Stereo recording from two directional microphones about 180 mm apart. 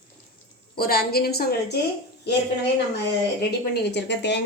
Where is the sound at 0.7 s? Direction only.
60° left (ahead or behind).